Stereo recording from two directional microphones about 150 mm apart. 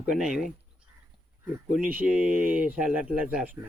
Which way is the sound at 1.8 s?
70° right (ahead or behind).